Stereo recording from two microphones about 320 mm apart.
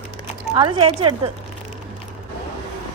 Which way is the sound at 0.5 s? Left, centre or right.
Centre.